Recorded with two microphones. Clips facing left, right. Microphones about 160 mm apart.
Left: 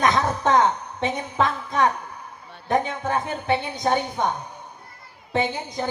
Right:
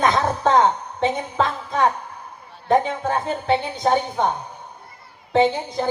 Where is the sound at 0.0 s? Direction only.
30° right (ahead or behind).